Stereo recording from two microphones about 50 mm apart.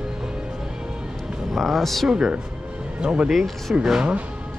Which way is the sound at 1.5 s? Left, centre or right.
Centre.